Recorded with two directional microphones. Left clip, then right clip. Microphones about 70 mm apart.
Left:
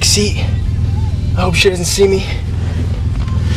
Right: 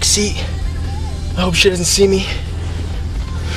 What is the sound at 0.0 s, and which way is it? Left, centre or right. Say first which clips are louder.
A man's voice: left 2 dB; centre.